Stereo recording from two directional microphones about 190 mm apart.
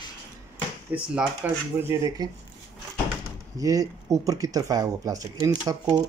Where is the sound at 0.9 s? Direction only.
5° right (ahead or behind).